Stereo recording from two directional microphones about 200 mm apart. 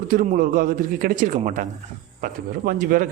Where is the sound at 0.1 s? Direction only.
45° right (ahead or behind).